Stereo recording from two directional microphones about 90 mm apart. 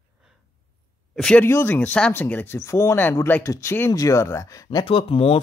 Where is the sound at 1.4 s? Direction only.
25° left (ahead or behind).